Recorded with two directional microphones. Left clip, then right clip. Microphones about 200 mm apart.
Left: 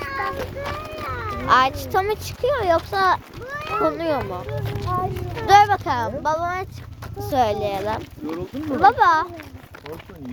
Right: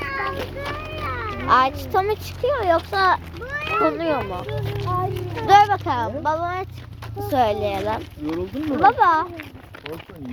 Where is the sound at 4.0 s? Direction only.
40° left (ahead or behind).